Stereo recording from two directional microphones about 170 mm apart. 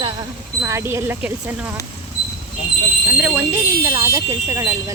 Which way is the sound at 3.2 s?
10° right (ahead or behind).